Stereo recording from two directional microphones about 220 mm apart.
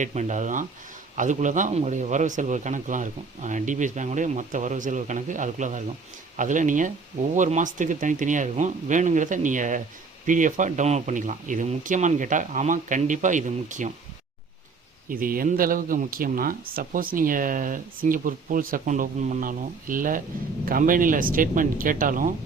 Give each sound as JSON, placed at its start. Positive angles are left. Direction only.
{"t": 0.0, "sound": "speech", "side_deg": -30}
{"t": 15.1, "sound": "speech", "side_deg": -40}